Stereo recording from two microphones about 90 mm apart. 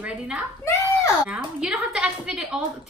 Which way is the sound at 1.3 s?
10° right (ahead or behind).